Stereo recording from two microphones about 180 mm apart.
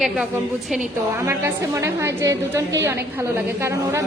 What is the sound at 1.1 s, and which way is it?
A woman's voice, 15° right (ahead or behind).